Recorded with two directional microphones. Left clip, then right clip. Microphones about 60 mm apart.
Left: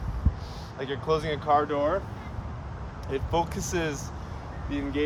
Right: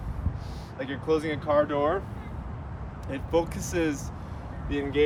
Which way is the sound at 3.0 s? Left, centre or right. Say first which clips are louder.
Right 1 dB; left.